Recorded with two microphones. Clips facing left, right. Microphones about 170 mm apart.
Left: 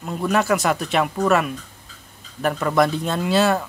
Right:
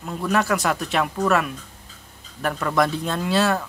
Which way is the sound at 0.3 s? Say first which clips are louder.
Left 2 dB; centre (ahead or behind).